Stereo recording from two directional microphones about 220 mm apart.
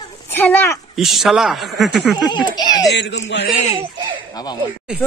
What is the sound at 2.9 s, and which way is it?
Speech, 50° left (ahead or behind).